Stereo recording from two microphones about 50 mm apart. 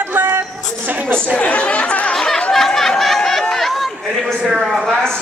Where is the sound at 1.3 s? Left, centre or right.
Left.